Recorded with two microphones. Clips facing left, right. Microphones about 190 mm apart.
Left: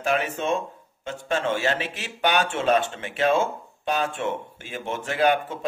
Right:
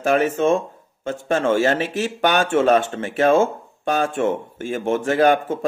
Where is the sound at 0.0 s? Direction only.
45° right (ahead or behind).